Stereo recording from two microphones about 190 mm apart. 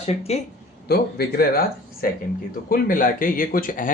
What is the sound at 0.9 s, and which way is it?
Speech, 55° left (ahead or behind).